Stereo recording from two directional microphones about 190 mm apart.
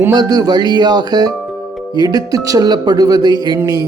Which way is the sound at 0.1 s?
20° right (ahead or behind).